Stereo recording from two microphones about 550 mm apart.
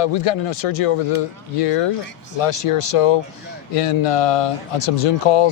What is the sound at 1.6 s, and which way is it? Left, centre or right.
Speech, left.